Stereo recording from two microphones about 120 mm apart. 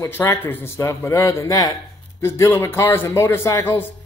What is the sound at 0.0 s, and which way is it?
A man's voice, 25° left (ahead or behind).